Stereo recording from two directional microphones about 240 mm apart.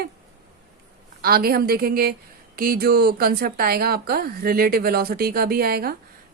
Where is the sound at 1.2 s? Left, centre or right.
Right.